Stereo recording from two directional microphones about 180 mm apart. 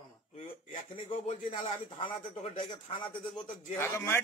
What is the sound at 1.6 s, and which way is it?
Speech, 30° left (ahead or behind).